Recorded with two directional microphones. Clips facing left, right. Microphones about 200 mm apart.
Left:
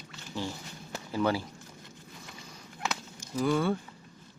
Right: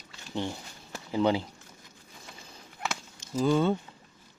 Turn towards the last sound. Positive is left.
turn(degrees=-20)  # may be behind; listen again after turning